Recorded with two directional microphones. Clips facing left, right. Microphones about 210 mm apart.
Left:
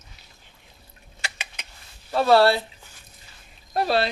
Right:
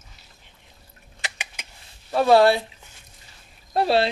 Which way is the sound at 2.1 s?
15° right (ahead or behind).